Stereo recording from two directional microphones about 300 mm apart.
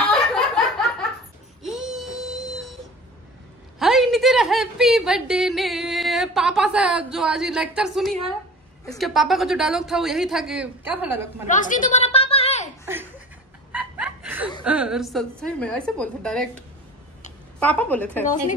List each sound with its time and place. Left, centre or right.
0.1 s a sound: centre
1.6 s wail: centre
3.8 s a woman's voice: centre
11.4 s a sound: left
13.7 s chuckle: centre
14.6 s a woman's voice: centre
17.6 s a woman's voice: centre